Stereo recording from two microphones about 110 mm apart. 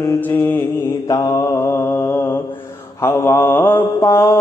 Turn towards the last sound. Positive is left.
turn(degrees=25)  # may be behind; listen again after turning